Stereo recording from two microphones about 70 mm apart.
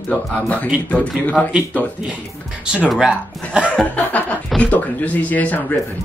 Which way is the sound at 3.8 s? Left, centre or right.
Left.